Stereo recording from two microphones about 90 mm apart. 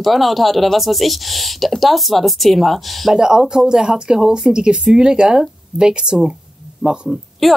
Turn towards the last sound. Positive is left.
turn(degrees=-5)  # may be behind; listen again after turning